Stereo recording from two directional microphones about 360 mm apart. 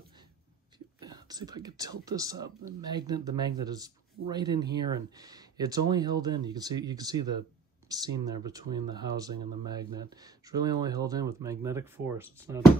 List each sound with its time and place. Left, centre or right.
1.0 s speech: centre